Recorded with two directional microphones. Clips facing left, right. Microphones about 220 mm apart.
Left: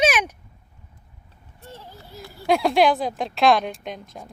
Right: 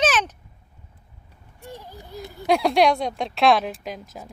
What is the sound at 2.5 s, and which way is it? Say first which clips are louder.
Speech: even; centre (ahead or behind).